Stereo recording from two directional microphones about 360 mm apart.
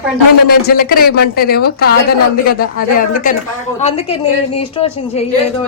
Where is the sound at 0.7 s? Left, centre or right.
Left.